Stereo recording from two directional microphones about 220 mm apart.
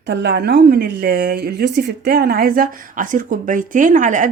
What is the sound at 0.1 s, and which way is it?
A woman's voice, 50° right (ahead or behind).